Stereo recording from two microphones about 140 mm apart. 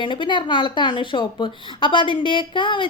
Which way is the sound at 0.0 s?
35° left (ahead or behind).